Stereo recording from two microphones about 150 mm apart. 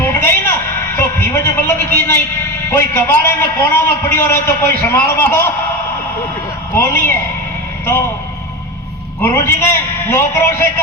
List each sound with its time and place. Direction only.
0.0 s a sound: 15° left (ahead or behind)
2.6 s a man's voice: 15° left (ahead or behind)
6.7 s a man's voice: 15° left (ahead or behind)
9.2 s a man's voice: 15° left (ahead or behind)